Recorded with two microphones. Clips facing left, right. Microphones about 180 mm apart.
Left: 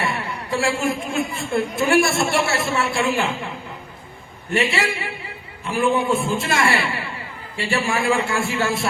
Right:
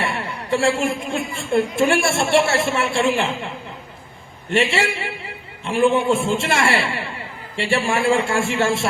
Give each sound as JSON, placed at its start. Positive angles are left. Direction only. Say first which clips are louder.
{"t": 0.0, "sound": "a sound", "louder": "even", "side_deg": -25}
{"t": 1.1, "sound": "a woman's voice", "louder": "right 2 dB", "side_deg": -25}
{"t": 4.4, "sound": "a woman's voice", "louder": "right 2 dB", "side_deg": -25}